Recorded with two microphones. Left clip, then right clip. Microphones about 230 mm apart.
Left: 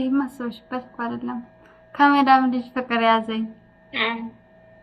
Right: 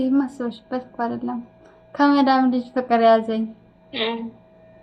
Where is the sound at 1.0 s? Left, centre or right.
Centre.